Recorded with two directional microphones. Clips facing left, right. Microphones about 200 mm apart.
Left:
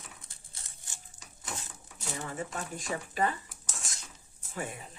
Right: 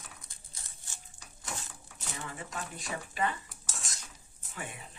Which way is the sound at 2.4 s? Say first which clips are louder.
Left 4 dB; 40° left (ahead or behind).